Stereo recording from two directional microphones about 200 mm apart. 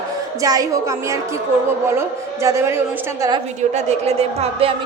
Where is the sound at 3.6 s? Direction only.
35° right (ahead or behind).